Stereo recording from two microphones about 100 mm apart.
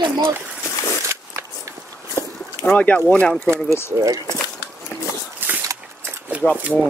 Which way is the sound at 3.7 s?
25° left (ahead or behind).